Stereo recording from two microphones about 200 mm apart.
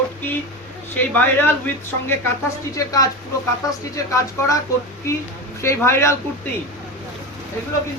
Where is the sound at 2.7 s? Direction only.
15° left (ahead or behind).